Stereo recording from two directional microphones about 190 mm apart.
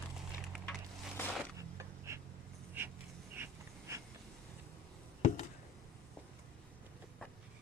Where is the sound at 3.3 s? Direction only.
15° right (ahead or behind).